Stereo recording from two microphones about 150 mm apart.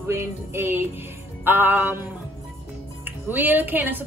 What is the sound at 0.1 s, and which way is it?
A woman's voice, 15° right (ahead or behind).